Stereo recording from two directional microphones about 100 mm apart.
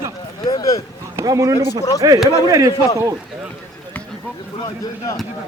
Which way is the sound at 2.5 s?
35° right (ahead or behind).